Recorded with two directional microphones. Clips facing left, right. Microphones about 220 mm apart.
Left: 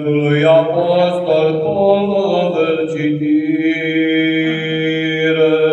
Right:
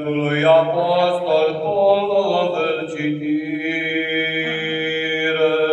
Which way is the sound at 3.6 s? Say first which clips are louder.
Left 9 dB; 20° left (ahead or behind).